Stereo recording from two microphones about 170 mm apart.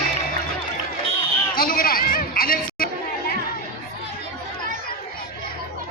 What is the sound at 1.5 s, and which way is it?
Chatter, 55° left (ahead or behind).